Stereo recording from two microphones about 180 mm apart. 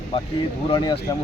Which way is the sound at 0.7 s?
25° left (ahead or behind).